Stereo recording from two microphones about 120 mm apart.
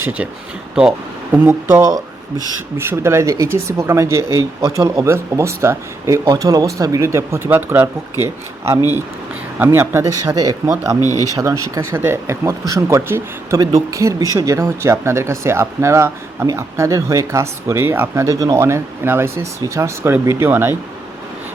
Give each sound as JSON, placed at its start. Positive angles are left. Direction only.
{"t": 0.0, "sound": "speech", "side_deg": -10}
{"t": 1.3, "sound": "speech", "side_deg": -20}
{"t": 6.2, "sound": "speech", "side_deg": -35}
{"t": 11.0, "sound": "speech", "side_deg": 30}
{"t": 11.3, "sound": "speech", "side_deg": -30}